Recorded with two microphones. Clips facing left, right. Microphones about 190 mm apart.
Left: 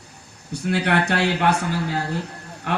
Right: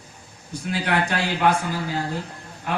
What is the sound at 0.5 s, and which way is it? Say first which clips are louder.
A man's voice: left 3 dB; 70° left (ahead or behind).